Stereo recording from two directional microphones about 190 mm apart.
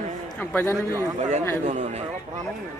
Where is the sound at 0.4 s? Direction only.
10° left (ahead or behind).